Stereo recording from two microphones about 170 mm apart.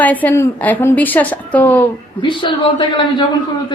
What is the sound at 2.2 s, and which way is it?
A man's voice, 30° left (ahead or behind).